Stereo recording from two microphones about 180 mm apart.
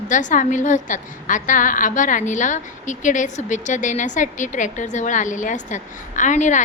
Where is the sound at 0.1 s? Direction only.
45° left (ahead or behind).